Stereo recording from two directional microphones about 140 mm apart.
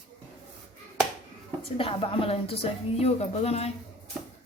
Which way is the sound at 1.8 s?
40° left (ahead or behind).